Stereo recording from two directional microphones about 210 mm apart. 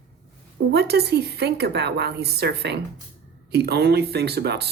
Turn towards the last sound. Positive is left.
turn(degrees=-50)  # may be behind; listen again after turning